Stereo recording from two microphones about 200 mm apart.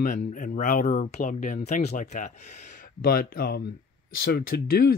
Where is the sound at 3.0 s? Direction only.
50° left (ahead or behind).